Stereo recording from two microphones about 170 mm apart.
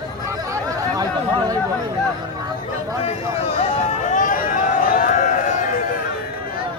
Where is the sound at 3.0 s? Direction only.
35° left (ahead or behind).